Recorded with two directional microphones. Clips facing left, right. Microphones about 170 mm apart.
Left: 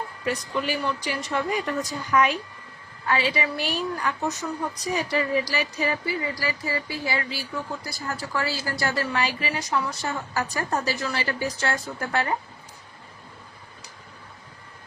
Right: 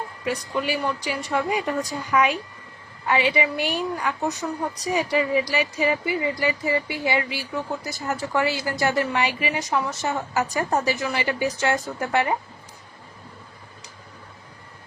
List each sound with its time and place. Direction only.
0.3 s a woman's voice: 10° right (ahead or behind)